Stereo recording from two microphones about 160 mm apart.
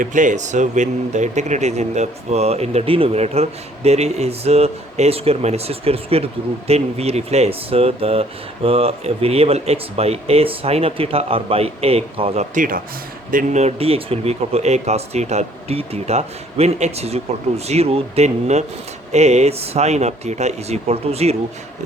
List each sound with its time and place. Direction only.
0.0 s speech: 55° right (ahead or behind); by 12.5 s 35° right (ahead or behind)
12.5 s speech: 60° right (ahead or behind)
13.3 s speech: 45° right (ahead or behind)